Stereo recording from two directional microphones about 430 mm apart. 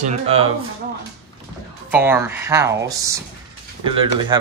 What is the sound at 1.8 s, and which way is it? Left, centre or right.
Speech, centre.